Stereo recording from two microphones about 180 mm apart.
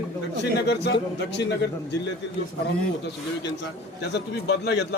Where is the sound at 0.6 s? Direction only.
70° left (ahead or behind).